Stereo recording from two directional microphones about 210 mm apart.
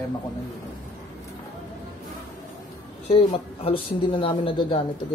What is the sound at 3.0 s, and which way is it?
Speech, 25° left (ahead or behind).